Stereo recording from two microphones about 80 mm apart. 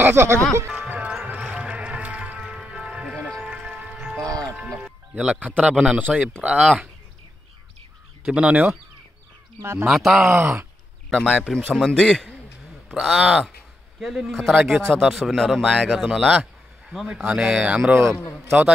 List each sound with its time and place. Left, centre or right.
0.0 s speech: right
0.7 s music: centre
4.6 s speech: centre
8.3 s speech: centre
9.6 s speech: right
9.8 s a man's voice: centre
11.1 s a man's voice: centre
12.9 s a man's voice: centre
14.9 s a man's voice: centre